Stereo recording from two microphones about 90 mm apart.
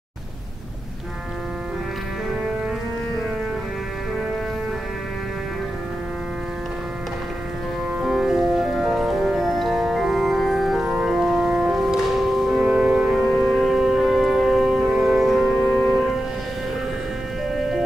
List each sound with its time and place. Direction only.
8.0 s music: 5° right (ahead or behind)
15.6 s music: 10° left (ahead or behind)